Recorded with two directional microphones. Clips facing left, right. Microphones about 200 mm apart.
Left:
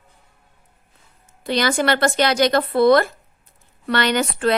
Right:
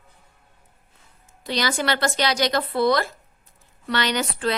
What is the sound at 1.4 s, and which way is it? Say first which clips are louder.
Speech: left 5 dB; 55° left (ahead or behind).